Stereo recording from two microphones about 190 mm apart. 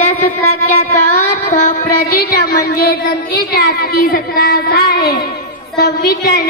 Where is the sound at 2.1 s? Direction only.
55° left (ahead or behind).